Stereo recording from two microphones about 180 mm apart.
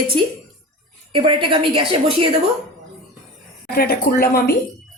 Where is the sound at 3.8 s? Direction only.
60° left (ahead or behind).